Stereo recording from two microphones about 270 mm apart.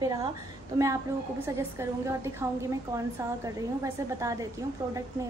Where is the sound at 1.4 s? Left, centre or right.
Centre.